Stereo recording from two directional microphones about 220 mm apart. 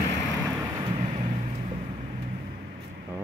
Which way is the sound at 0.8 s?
25° right (ahead or behind).